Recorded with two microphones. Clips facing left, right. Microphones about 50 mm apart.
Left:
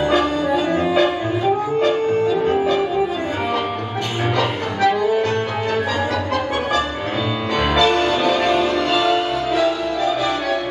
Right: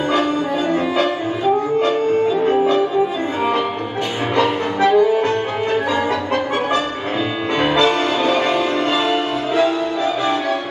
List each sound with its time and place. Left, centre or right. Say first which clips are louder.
2.4 s music: right 2 dB; right
4.4 s music: right 4 dB; right
7.5 s music: right 1 dB; right